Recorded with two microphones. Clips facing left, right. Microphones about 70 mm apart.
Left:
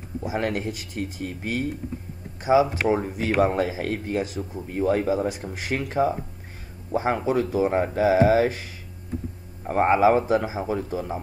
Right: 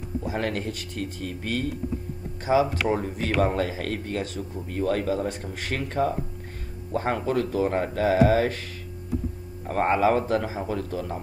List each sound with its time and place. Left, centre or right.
0.2 s speech: centre
9.7 s speech: centre